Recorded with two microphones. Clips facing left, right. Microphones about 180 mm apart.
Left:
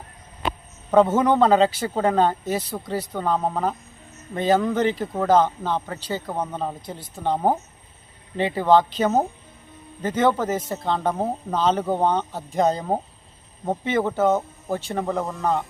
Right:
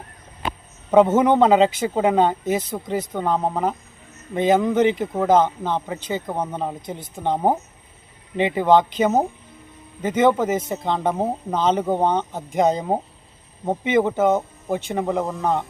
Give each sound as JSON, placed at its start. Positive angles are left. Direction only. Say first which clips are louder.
{"t": 0.9, "sound": "a man's voice", "louder": "right 2 dB", "side_deg": -15}
{"t": 15.2, "sound": "speech", "louder": "right 2 dB", "side_deg": 0}